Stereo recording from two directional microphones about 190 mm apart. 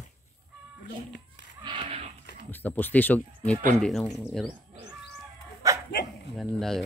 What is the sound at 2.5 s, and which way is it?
Speech, 10° left (ahead or behind).